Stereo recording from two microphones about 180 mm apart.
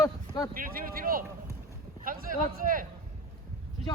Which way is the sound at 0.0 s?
20° left (ahead or behind).